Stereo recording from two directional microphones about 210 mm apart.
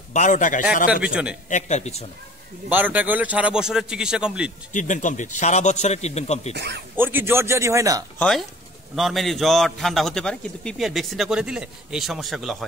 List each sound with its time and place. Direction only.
0.1 s a man's voice: 35° left (ahead or behind)
1.0 s a man's voice: 5° right (ahead or behind)
1.5 s a man's voice: 30° left (ahead or behind)
2.7 s a man's voice: 10° right (ahead or behind)
4.7 s a man's voice: 35° left (ahead or behind)
6.5 s speech: 55° right (ahead or behind)
7.0 s a man's voice: 10° right (ahead or behind)
8.2 s a man's voice: centre (ahead or behind)